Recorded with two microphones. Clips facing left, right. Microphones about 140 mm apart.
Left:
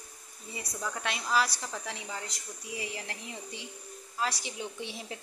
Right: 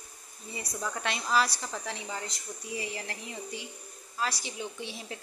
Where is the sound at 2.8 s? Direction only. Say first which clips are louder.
Right 1 dB; 20° left (ahead or behind).